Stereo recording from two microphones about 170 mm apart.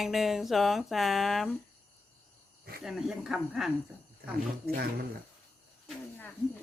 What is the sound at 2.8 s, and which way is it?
Speech, centre (ahead or behind).